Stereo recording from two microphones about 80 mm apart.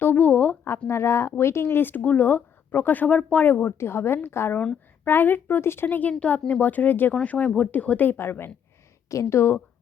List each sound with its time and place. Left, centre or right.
0.0 s a sound: left
0.9 s speech: left; by 3.4 s centre
3.4 s speech: left